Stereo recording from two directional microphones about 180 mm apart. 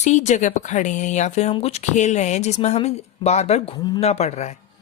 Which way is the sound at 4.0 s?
35° left (ahead or behind).